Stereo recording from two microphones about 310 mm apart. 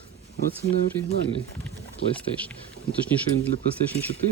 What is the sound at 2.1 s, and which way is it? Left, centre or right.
Speech, centre.